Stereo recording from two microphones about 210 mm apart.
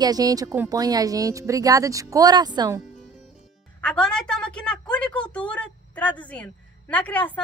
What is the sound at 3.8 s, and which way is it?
A woman's voice, 5° left (ahead or behind).